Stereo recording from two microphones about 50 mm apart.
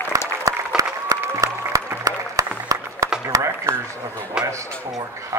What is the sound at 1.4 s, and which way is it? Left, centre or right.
Applause, right.